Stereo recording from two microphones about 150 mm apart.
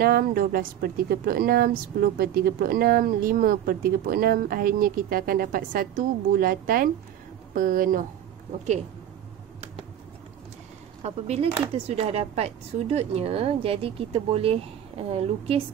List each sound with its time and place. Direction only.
0.0 s a woman's voice: 85° right; by 8.0 s 65° right (ahead or behind)
11.0 s a woman's voice: 45° right (ahead or behind)